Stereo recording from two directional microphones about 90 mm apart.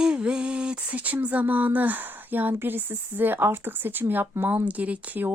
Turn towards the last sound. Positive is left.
turn(degrees=-20)  # may be behind; listen again after turning